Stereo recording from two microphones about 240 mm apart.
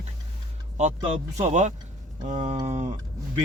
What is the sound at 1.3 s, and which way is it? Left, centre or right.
Speech, right.